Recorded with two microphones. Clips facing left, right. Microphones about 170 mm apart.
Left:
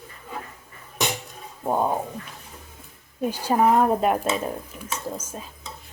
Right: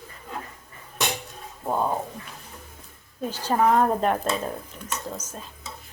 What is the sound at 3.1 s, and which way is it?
Speech, 10° left (ahead or behind).